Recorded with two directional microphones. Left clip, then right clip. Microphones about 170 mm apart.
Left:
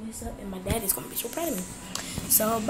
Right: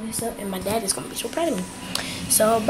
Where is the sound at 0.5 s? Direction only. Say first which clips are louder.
Right 5 dB; 5° left (ahead or behind).